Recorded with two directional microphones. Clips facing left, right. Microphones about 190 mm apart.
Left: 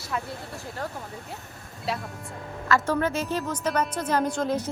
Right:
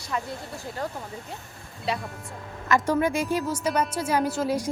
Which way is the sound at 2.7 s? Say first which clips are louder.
Right 1 dB; 15° right (ahead or behind).